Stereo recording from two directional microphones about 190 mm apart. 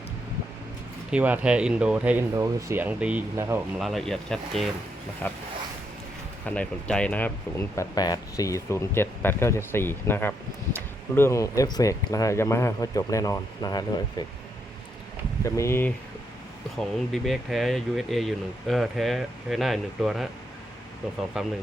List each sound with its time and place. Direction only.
1.1 s speech: 10° right (ahead or behind)
3.8 s speech: centre (ahead or behind)
6.4 s speech: 5° left (ahead or behind)
7.8 s speech: 20° left (ahead or behind)
15.4 s speech: 15° left (ahead or behind)
17.1 s speech: centre (ahead or behind)
21.4 s speech: 5° right (ahead or behind)